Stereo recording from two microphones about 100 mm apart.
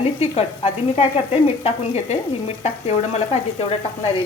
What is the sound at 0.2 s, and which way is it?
Sizzle, 90° left.